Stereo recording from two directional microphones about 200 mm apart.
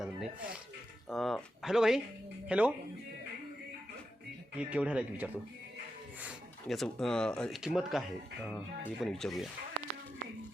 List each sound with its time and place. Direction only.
0.0 s speech: centre (ahead or behind)
4.5 s speech: 5° right (ahead or behind)